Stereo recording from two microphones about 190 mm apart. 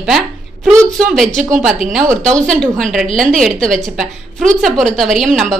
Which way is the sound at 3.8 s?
Centre (ahead or behind).